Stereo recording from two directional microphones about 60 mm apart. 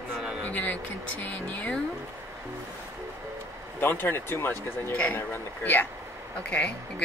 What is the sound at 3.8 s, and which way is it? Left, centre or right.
Speech, left.